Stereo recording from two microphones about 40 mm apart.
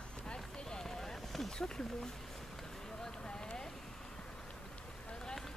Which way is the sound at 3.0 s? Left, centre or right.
Centre.